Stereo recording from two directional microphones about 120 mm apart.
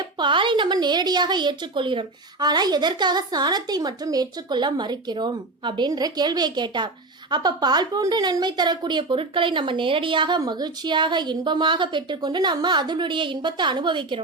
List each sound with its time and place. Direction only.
0.2 s a woman's voice: 40° right (ahead or behind)